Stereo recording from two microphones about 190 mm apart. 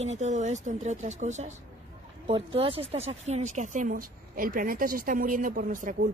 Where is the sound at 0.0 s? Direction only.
35° right (ahead or behind).